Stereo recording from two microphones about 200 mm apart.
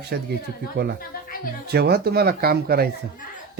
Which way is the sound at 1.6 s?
50° right (ahead or behind).